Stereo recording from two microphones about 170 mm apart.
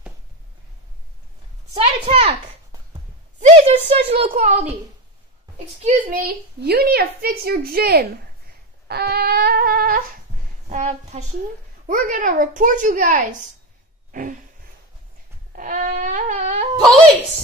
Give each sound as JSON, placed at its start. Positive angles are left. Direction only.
{"t": 1.7, "sound": "a woman's voice", "side_deg": -35}
{"t": 3.3, "sound": "a woman's voice", "side_deg": -45}
{"t": 4.3, "sound": "speech", "side_deg": -50}
{"t": 5.8, "sound": "speech", "side_deg": -50}
{"t": 8.8, "sound": "a sound", "side_deg": -70}
{"t": 10.7, "sound": "speech", "side_deg": -45}
{"t": 15.5, "sound": "wail", "side_deg": -50}